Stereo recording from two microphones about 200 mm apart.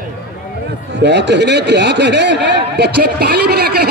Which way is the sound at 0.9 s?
60° right (ahead or behind).